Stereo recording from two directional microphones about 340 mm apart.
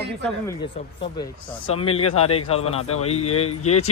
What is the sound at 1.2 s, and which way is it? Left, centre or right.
A man's voice, centre.